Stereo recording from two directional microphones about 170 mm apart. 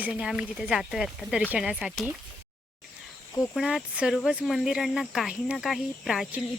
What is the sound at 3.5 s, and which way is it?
Speech, 5° right (ahead or behind).